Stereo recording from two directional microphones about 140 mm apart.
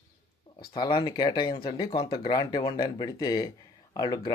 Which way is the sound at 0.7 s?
35° left (ahead or behind).